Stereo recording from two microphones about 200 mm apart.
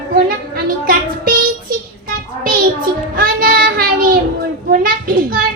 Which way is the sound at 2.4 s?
45° right (ahead or behind).